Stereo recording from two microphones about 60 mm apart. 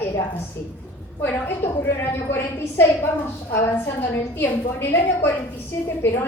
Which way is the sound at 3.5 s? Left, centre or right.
Left.